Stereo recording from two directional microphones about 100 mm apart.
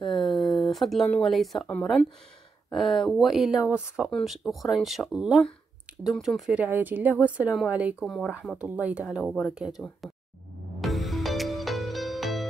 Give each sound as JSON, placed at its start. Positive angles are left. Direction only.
{"t": 0.0, "sound": "a sound", "side_deg": 0}
{"t": 1.2, "sound": "speech", "side_deg": 0}
{"t": 2.7, "sound": "speech", "side_deg": 0}
{"t": 6.6, "sound": "speech", "side_deg": -20}
{"t": 8.0, "sound": "speech", "side_deg": 0}
{"t": 8.5, "sound": "speech", "side_deg": -15}
{"t": 9.0, "sound": "speech", "side_deg": -5}
{"t": 10.8, "sound": "music", "side_deg": 0}